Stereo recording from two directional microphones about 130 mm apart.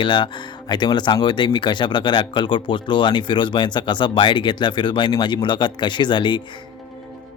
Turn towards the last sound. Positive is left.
turn(degrees=40)  # may be behind; listen again after turning